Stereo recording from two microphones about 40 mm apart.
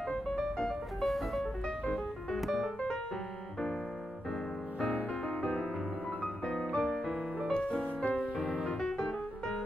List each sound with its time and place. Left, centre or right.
0.3 s music: centre
2.3 s piano: centre
5.4 s music: centre
7.8 s music: left
8.7 s music: centre